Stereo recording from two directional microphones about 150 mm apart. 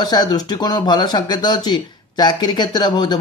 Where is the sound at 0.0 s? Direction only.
30° left (ahead or behind).